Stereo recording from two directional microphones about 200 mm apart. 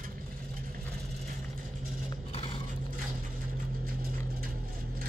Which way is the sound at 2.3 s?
25° left (ahead or behind).